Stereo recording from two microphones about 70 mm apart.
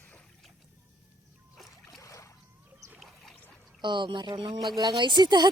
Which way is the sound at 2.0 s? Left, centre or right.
Left.